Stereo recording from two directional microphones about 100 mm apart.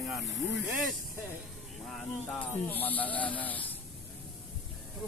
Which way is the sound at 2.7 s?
15° left (ahead or behind).